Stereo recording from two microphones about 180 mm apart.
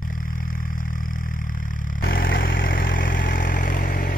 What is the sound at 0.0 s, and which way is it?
Vehicle, 50° left (ahead or behind).